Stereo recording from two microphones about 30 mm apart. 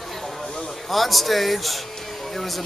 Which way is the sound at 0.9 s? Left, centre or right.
Centre.